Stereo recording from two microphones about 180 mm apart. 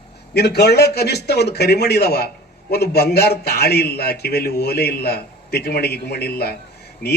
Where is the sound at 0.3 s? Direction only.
65° left (ahead or behind).